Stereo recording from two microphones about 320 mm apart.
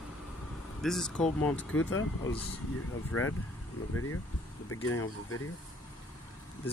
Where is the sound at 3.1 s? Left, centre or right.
Left.